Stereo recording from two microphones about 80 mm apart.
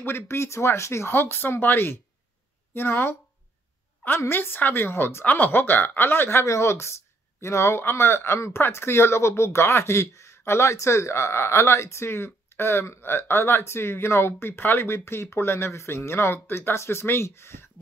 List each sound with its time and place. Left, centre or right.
0.0 s a woman's voice: left
4.2 s a woman's voice: left